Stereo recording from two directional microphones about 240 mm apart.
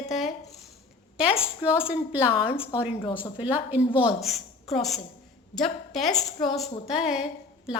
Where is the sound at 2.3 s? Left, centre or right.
Left.